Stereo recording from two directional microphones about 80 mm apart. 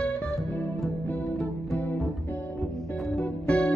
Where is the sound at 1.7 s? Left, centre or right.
Left.